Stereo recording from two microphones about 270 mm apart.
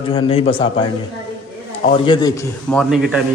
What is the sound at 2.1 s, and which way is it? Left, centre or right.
Speech, centre.